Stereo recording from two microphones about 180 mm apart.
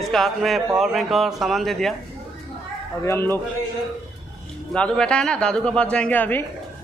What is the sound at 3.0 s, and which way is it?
Speech, 15° left (ahead or behind).